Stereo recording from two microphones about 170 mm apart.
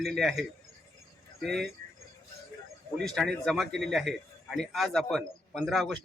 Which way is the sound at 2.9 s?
Centre (ahead or behind).